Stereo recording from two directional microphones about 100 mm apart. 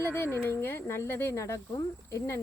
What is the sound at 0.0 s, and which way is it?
Speech, 25° left (ahead or behind).